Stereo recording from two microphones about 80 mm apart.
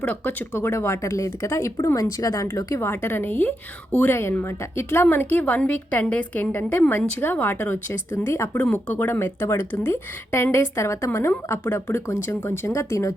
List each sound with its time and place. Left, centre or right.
0.0 s a woman's voice: left
2.8 s a woman's voice: left
8.9 s speech: left
11.6 s a woman's voice: left